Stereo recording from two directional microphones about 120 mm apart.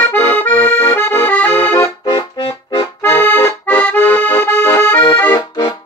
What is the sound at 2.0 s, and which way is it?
Accordion, 35° left (ahead or behind).